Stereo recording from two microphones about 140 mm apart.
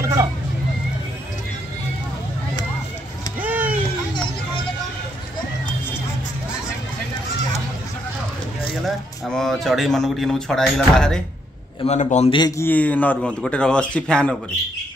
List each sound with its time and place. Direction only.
0.0 s vehicle: 20° right (ahead or behind)
3.3 s a sound: 10° right (ahead or behind)
8.8 s a man's voice: centre (ahead or behind)
11.8 s a man's voice: 55° left (ahead or behind)
12.3 s a man's voice: 30° left (ahead or behind)
12.5 s a man's voice: 15° left (ahead or behind)